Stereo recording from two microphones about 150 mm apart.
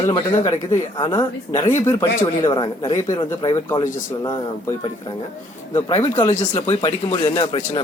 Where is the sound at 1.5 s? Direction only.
20° left (ahead or behind).